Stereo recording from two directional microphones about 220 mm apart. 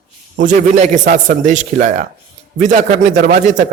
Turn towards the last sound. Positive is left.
turn(degrees=-35)  # may be behind; listen again after turning